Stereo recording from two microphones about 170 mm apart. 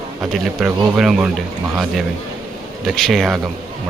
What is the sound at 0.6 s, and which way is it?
Speech, 5° right (ahead or behind).